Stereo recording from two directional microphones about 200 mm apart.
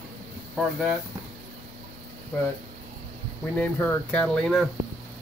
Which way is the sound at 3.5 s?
5° left (ahead or behind).